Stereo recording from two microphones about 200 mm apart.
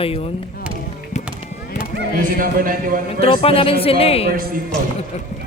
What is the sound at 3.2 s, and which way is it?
Speech, 30° left (ahead or behind).